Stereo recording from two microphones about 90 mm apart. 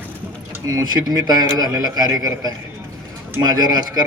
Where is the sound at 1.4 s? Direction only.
45° right (ahead or behind).